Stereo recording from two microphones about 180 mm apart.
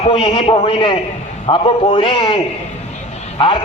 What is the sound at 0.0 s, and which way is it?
A man's voice, 30° left (ahead or behind).